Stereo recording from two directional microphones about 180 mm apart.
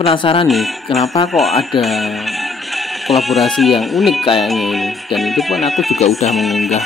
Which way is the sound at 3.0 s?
Centre (ahead or behind).